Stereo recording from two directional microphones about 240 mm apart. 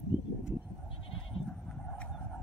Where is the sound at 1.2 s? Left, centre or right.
Centre.